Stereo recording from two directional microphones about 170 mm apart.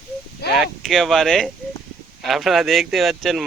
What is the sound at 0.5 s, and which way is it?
Speech, centre (ahead or behind).